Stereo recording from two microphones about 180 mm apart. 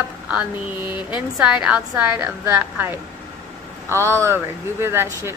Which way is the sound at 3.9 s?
15° right (ahead or behind).